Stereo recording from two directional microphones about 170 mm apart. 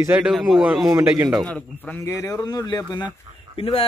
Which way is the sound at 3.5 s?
35° left (ahead or behind).